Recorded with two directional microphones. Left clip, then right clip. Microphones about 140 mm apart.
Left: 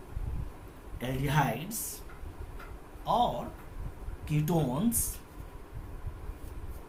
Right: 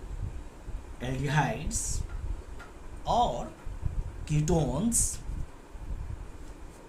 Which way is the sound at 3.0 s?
35° right (ahead or behind).